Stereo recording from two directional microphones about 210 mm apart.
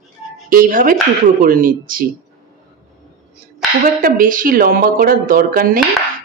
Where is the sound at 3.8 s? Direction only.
40° right (ahead or behind).